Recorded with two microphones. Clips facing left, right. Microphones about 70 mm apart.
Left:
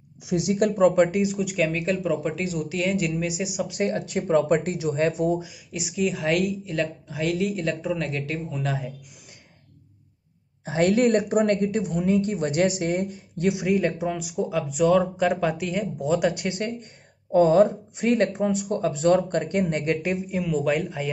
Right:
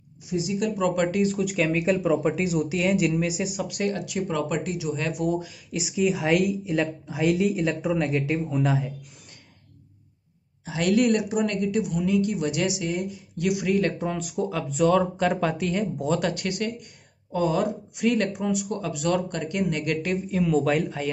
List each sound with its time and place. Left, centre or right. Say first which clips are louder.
0.3 s speech: left 4 dB; left
1.1 s speech: even; centre
1.4 s speech: right 1 dB; centre
3.6 s speech: left 2 dB; left
5.7 s a woman's voice: right 2 dB; centre
8.6 s speech: right 3 dB; centre
10.6 s speech: left 2 dB; left
13.5 s speech: left 1 dB; left; by 16.3 s centre
16.3 s speech: left 2 dB; left
20.3 s speech: right 3 dB; centre